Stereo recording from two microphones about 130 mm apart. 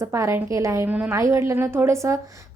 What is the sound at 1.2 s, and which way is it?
A woman's voice, 25° right (ahead or behind).